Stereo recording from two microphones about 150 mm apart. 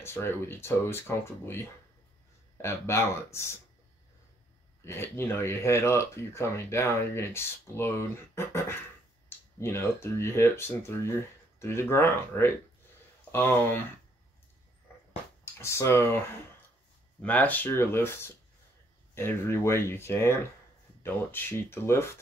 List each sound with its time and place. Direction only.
0.0 s speech: 15° left (ahead or behind)
4.8 s speech: 15° left (ahead or behind)
14.9 s a sound: 15° left (ahead or behind)
15.5 s speech: 15° left (ahead or behind)